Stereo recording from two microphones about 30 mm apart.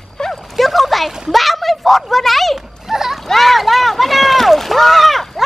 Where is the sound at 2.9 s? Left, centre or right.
Centre.